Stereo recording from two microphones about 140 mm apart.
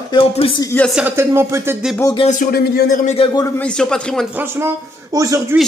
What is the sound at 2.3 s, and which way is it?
Speech, 70° left (ahead or behind).